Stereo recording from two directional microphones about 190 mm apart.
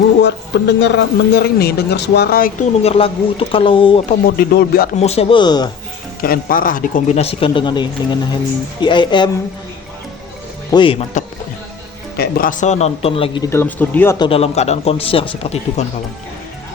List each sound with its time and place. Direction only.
0.2 s speech: 65° left (ahead or behind)
2.8 s speech: 30° left (ahead or behind)
4.3 s speech: 55° left (ahead or behind)
4.9 s speech: 35° left (ahead or behind)
6.2 s speech: 50° left (ahead or behind); by 9.3 s 25° left (ahead or behind)
10.7 s speech: 25° left (ahead or behind)
12.1 s speech: 50° left (ahead or behind); by 13.5 s 25° left (ahead or behind)
13.5 s speech: 10° left (ahead or behind)
14.2 s speech: 30° left (ahead or behind)